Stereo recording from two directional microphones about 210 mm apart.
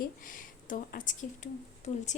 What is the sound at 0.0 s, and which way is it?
A woman's voice, 40° left (ahead or behind).